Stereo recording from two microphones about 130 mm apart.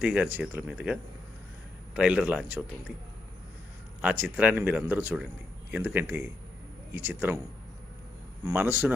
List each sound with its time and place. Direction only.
0.0 s speech: 5° right (ahead or behind)
4.0 s speech: 15° right (ahead or behind)
8.4 s speech: 15° right (ahead or behind)